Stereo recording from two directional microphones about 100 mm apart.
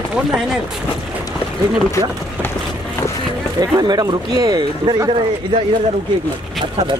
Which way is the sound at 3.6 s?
40° right (ahead or behind).